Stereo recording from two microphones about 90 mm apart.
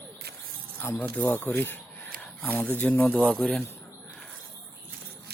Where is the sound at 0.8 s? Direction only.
20° left (ahead or behind).